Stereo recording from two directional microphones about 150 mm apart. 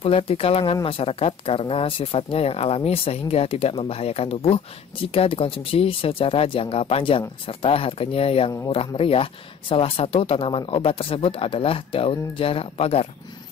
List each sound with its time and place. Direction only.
0.0 s speech: 40° left (ahead or behind)